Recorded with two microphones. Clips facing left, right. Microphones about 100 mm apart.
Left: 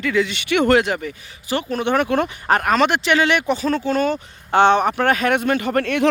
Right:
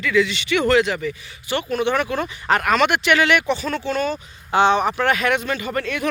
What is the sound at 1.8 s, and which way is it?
Speech, 45° left (ahead or behind).